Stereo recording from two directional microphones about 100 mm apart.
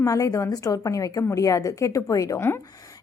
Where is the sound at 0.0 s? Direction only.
35° left (ahead or behind).